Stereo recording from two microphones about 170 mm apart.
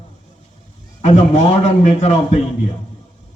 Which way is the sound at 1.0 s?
40° left (ahead or behind).